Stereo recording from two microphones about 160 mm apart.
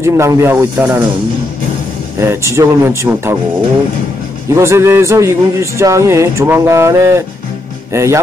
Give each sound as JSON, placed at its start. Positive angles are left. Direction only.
{"t": 0.0, "sound": "a man's voice", "side_deg": -15}
{"t": 2.1, "sound": "a man's voice", "side_deg": -15}
{"t": 4.5, "sound": "a man's voice", "side_deg": -15}